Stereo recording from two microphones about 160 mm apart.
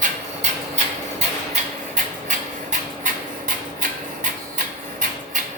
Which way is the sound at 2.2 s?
55° right (ahead or behind).